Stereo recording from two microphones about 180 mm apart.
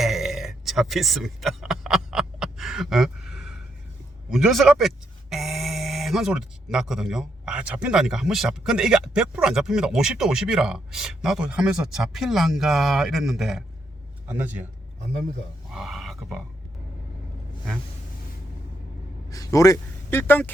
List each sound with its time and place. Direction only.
0.0 s a sound: centre (ahead or behind)
4.3 s a man's voice: centre (ahead or behind)
15.7 s grunt: centre (ahead or behind)
19.3 s a man's voice: 20° left (ahead or behind)